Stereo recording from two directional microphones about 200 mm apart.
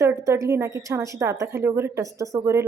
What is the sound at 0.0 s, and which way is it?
A woman's voice, 15° right (ahead or behind).